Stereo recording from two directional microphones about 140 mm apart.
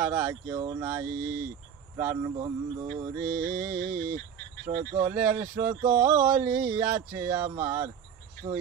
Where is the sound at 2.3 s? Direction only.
35° right (ahead or behind).